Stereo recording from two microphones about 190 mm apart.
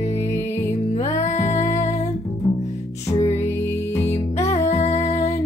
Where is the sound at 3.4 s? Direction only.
15° left (ahead or behind).